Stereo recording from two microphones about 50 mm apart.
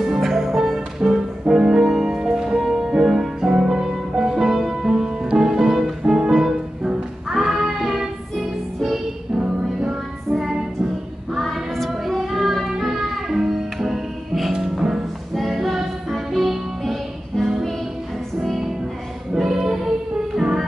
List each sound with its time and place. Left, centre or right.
0.0 s music: centre
11.3 s child singing: centre
14.5 s music: centre